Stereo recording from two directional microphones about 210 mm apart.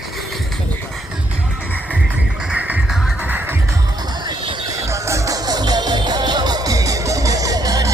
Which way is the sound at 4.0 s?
20° right (ahead or behind).